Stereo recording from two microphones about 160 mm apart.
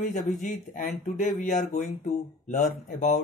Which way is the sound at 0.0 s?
50° left (ahead or behind).